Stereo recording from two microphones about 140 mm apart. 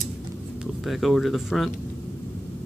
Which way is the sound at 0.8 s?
Centre (ahead or behind).